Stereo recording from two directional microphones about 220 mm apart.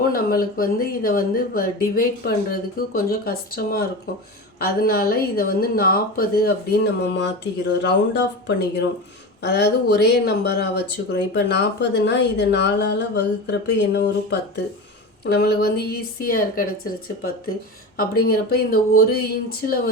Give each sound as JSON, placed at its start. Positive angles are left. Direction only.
{"t": 0.1, "sound": "speech", "side_deg": 40}